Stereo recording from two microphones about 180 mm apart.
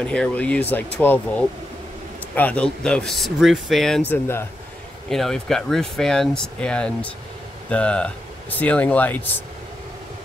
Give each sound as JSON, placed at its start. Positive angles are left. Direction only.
{"t": 0.0, "sound": "speech", "side_deg": 5}
{"t": 4.1, "sound": "speech", "side_deg": 15}
{"t": 5.1, "sound": "speech", "side_deg": 0}